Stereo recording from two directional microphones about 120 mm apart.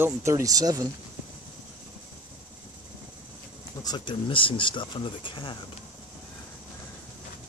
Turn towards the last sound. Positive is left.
turn(degrees=45)  # may be behind; listen again after turning